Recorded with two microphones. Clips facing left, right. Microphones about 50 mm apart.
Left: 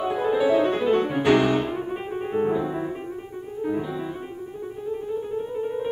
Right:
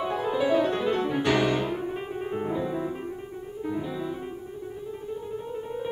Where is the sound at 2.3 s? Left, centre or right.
Centre.